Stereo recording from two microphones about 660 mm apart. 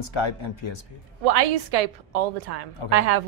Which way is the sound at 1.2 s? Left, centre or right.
Right.